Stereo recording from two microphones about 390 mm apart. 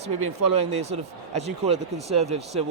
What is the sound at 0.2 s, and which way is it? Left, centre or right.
Speech, right.